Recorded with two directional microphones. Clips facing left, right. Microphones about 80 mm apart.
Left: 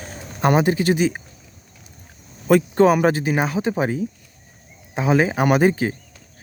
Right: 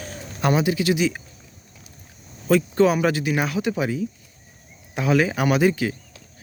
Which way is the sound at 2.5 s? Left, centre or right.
Left.